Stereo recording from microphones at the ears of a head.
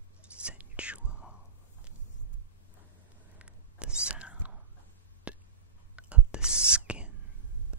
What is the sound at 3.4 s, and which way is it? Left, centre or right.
Whispering, centre.